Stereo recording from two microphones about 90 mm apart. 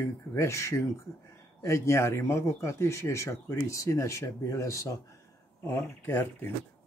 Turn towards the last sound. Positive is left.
turn(degrees=25)  # may be behind; listen again after turning